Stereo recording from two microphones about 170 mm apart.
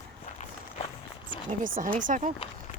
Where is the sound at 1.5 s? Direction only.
50° right (ahead or behind).